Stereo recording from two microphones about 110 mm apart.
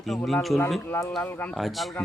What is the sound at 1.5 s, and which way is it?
Speech, centre (ahead or behind).